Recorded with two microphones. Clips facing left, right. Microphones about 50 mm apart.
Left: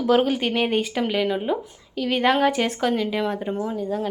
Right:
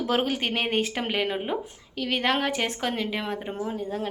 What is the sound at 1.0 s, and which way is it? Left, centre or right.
Speech, right.